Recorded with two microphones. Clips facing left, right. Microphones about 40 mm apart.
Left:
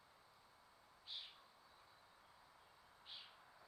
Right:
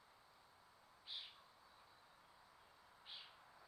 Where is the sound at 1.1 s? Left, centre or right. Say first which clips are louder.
Even; centre.